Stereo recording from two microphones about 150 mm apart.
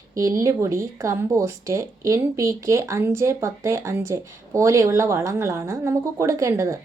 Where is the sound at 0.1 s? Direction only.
20° right (ahead or behind).